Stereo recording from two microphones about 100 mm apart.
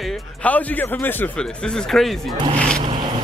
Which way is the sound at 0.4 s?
15° left (ahead or behind).